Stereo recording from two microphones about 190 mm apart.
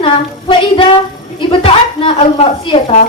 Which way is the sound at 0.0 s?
25° left (ahead or behind).